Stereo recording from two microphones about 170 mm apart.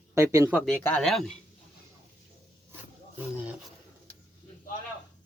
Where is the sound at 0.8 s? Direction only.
5° left (ahead or behind).